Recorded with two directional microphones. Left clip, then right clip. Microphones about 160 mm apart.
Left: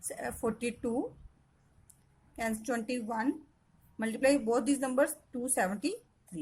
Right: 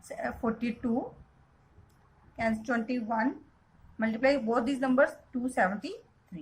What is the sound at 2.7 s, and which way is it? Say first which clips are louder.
A woman's voice: right 3 dB; 55° left (ahead or behind).